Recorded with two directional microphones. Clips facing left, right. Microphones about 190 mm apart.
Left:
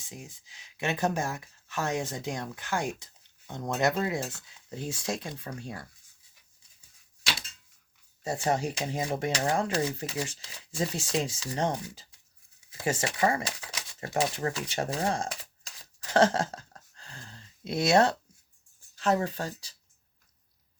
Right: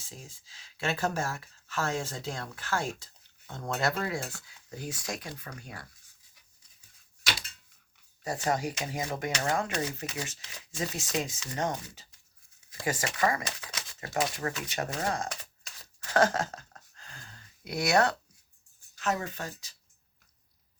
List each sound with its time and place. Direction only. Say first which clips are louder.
0.0 s speech: left 3 dB; 20° left (ahead or behind)
8.2 s speech: left 2 dB; 25° left (ahead or behind)
16.1 s a sound: left 2 dB; 30° left (ahead or behind)
18.9 s speech: left 5 dB; 35° left (ahead or behind)